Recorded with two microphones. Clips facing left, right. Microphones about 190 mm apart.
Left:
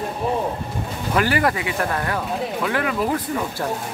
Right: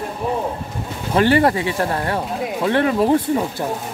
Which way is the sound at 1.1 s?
30° right (ahead or behind).